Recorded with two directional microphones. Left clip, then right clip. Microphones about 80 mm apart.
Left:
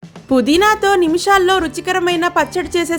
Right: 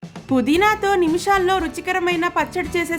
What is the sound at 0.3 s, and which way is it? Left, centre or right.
Speech, left.